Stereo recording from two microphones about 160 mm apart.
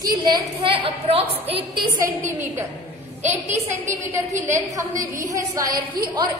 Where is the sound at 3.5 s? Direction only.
15° right (ahead or behind).